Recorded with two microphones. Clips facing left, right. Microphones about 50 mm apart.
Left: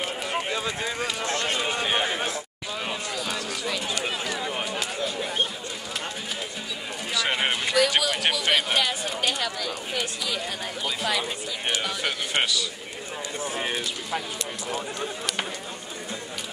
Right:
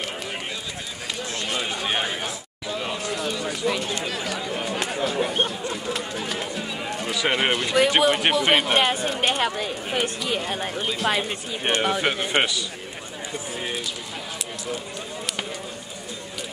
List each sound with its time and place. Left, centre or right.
1.2 s run: left
1.6 s run: centre
2.7 s a sound: centre
3.1 s a sound: centre
4.3 s run: centre
7.2 s speech: centre
7.7 s speech: right